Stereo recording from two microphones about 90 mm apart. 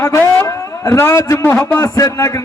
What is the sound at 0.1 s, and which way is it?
A man's voice, 20° left (ahead or behind).